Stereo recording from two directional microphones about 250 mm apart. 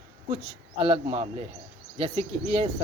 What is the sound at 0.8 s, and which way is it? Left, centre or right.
Speech, right.